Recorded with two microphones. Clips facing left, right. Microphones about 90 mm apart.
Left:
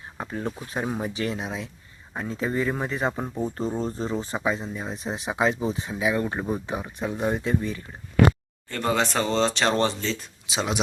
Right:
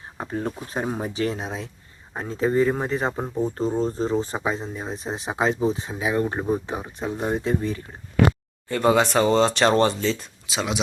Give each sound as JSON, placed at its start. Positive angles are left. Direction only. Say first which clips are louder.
{"t": 0.2, "sound": "speech", "louder": "right 3 dB", "side_deg": -40}
{"t": 8.7, "sound": "speech", "louder": "right 6 dB", "side_deg": -5}
{"t": 10.4, "sound": "speech", "louder": "even", "side_deg": 25}